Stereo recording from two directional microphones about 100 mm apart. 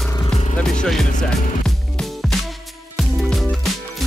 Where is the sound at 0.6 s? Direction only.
10° left (ahead or behind).